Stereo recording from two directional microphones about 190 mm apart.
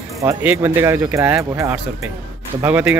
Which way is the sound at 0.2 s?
10° right (ahead or behind).